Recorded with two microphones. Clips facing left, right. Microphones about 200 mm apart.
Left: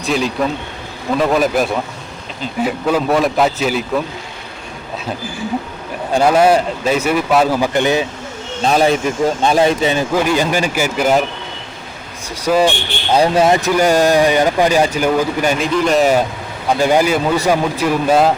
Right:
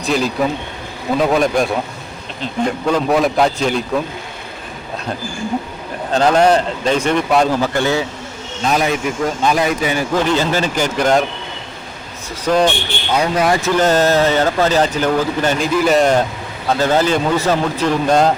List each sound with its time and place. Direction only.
0.0 s a man's voice: centre (ahead or behind)
6.1 s speech: 10° left (ahead or behind)
8.6 s speech: 30° left (ahead or behind)
10.1 s speech: 10° left (ahead or behind)
12.5 s speech: 5° left (ahead or behind)
13.1 s speech: 30° left (ahead or behind); by 15.6 s 10° left (ahead or behind)
15.6 s a man's voice: 5° right (ahead or behind)